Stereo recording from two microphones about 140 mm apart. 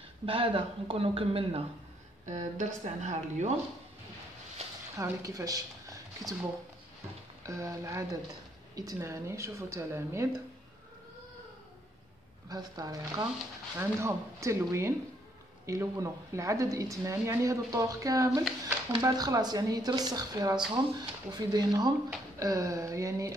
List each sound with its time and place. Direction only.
0.2 s speech: 40° right (ahead or behind)
2.2 s a woman's voice: 60° right (ahead or behind)
4.9 s speech: 20° right (ahead or behind)
7.4 s a woman's voice: 25° right (ahead or behind)
12.4 s a woman's voice: 30° right (ahead or behind)